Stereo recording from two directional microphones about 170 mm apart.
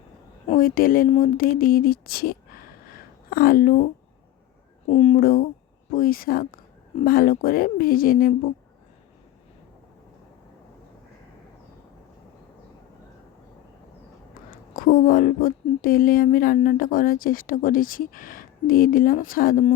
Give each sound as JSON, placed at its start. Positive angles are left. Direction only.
{"t": 0.6, "sound": "speech", "side_deg": 55}
{"t": 4.9, "sound": "speech", "side_deg": 40}
{"t": 5.2, "sound": "speech", "side_deg": 60}
{"t": 14.7, "sound": "speech", "side_deg": 55}